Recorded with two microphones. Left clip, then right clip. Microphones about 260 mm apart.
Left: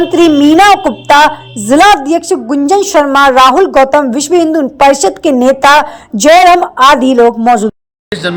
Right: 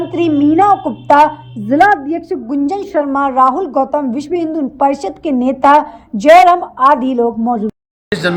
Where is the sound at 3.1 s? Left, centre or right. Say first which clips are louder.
Left 6 dB; left.